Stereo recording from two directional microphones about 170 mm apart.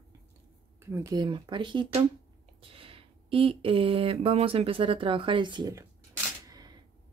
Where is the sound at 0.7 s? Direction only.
15° right (ahead or behind).